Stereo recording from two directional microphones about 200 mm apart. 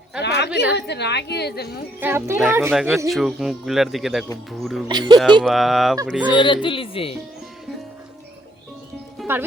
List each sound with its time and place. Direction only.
0.2 s a sound: 60° left (ahead or behind)
0.8 s a woman's voice: 55° left (ahead or behind)
2.0 s speech: 10° right (ahead or behind)
4.9 s speech: 20° right (ahead or behind)
5.4 s speech: centre (ahead or behind)
6.3 s speech: 25° left (ahead or behind)
9.2 s music: centre (ahead or behind)